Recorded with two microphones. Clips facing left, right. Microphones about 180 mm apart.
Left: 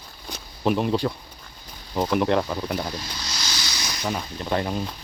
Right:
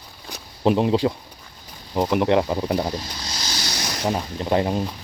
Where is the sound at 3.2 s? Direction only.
45° right (ahead or behind).